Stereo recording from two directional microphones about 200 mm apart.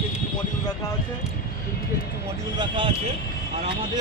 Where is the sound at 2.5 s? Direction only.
25° right (ahead or behind).